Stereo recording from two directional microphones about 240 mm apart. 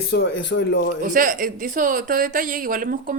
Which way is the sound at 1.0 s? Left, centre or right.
Right.